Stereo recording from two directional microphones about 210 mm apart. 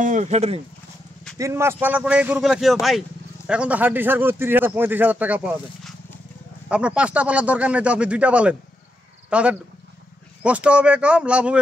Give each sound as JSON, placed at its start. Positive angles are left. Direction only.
{"t": 0.0, "sound": "speech", "side_deg": -35}
{"t": 1.4, "sound": "a man's voice", "side_deg": -15}